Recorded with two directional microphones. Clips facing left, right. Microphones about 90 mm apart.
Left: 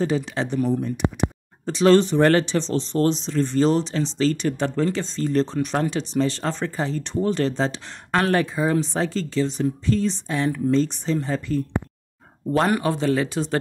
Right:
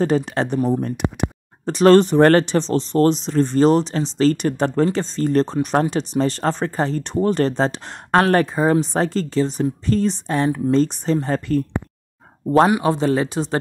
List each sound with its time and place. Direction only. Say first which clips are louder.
0.0 s speech: right 4 dB; 50° right (ahead or behind)
12.8 s speech: right 3 dB; 30° right (ahead or behind)